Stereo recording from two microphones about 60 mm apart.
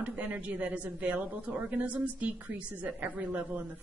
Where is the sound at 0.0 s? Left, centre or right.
Right.